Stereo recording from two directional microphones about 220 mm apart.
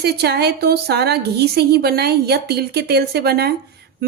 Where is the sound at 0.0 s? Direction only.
45° right (ahead or behind).